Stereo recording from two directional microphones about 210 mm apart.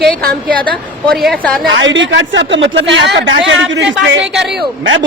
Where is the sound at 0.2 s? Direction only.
45° right (ahead or behind).